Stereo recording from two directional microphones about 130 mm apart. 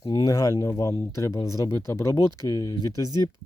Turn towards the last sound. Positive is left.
turn(degrees=25)  # may be behind; listen again after turning